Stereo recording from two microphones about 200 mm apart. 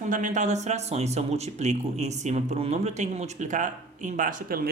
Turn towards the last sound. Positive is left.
turn(degrees=-45)  # may be behind; listen again after turning